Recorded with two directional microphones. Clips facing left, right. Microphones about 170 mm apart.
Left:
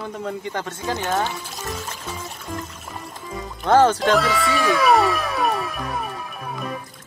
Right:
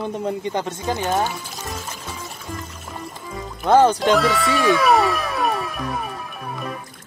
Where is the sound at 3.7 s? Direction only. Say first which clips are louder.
Right 1 dB; 15° right (ahead or behind).